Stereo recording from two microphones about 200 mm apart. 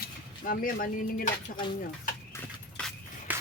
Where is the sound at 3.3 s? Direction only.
10° right (ahead or behind).